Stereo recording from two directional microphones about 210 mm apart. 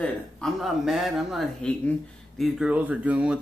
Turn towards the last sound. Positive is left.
turn(degrees=-5)  # may be behind; listen again after turning